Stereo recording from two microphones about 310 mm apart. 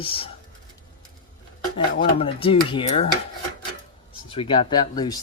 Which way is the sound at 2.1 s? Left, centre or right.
Centre.